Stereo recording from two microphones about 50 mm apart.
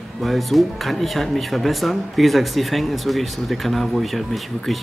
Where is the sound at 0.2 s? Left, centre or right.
Centre.